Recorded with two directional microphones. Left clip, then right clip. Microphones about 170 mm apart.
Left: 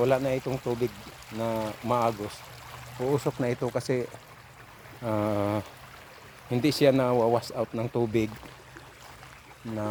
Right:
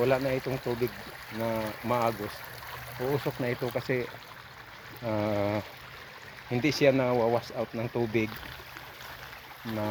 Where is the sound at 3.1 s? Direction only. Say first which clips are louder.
Left 3 dB; 30° left (ahead or behind).